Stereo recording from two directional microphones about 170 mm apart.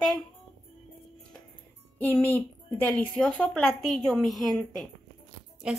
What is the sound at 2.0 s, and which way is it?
A woman's voice, 10° left (ahead or behind).